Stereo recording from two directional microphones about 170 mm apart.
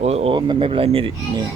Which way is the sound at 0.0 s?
40° right (ahead or behind).